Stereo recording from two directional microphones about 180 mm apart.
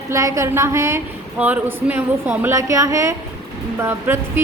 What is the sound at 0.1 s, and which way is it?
A woman's voice, 15° right (ahead or behind).